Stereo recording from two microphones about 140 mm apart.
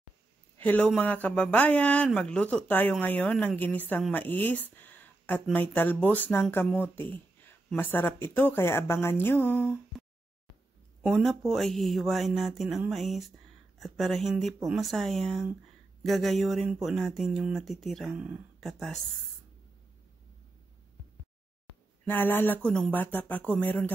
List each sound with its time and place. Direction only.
0.6 s speech: 10° left (ahead or behind)
11.1 s speech: centre (ahead or behind)
22.0 s speech: 15° left (ahead or behind)